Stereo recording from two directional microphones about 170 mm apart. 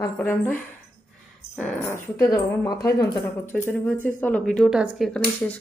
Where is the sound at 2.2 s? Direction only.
20° left (ahead or behind); by 5.0 s 5° right (ahead or behind).